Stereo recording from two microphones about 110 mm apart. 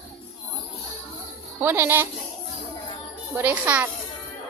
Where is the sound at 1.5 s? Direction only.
20° right (ahead or behind).